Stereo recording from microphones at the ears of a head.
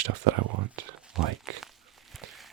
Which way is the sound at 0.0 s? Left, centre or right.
Right.